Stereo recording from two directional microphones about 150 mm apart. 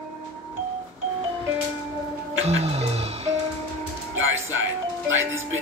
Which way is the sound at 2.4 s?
45° right (ahead or behind).